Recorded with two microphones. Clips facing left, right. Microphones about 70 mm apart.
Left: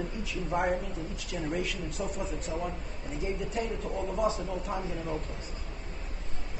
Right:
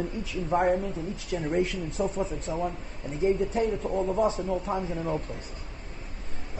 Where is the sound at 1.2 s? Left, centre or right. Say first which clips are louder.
Right 6 dB; right.